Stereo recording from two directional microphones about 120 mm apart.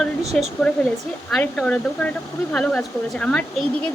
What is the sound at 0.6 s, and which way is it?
Speech, 10° left (ahead or behind).